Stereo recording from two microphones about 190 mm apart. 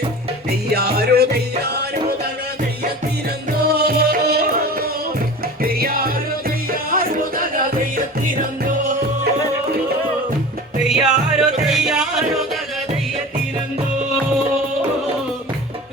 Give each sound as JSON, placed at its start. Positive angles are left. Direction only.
{"t": 0.7, "sound": "music", "side_deg": -55}
{"t": 3.6, "sound": "music", "side_deg": -55}
{"t": 5.6, "sound": "music", "side_deg": -50}
{"t": 10.8, "sound": "music", "side_deg": -5}